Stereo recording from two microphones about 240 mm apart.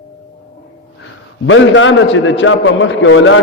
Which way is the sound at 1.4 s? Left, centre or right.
Left.